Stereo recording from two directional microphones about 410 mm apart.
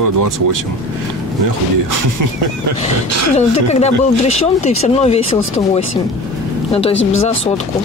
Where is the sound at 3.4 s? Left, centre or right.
Centre.